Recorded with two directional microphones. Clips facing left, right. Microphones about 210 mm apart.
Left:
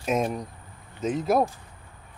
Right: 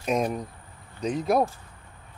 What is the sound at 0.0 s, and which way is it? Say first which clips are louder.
Speech: even; centre (ahead or behind).